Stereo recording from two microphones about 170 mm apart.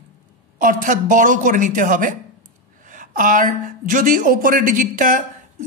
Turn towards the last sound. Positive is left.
turn(degrees=-50)  # may be behind; listen again after turning